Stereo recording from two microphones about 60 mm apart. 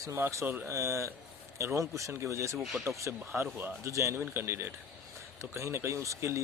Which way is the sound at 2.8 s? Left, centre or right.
Right.